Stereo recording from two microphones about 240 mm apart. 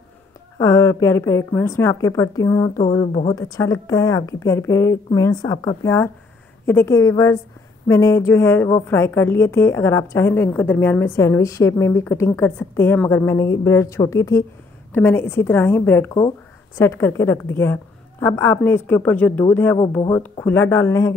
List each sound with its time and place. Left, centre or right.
0.6 s a woman's voice: centre